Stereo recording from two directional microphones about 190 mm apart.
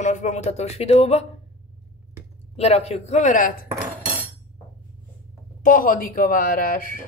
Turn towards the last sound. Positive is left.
turn(degrees=45)  # may be behind; listen again after turning